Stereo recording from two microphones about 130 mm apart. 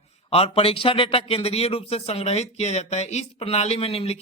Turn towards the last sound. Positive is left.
turn(degrees=50)  # may be behind; listen again after turning